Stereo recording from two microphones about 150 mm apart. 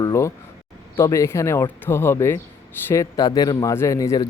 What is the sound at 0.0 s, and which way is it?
A man's voice, 20° left (ahead or behind).